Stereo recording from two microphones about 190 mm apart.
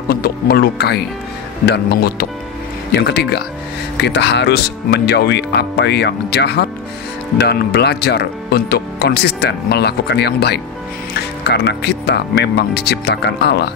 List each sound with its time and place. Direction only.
0.1 s speech: 55° left (ahead or behind)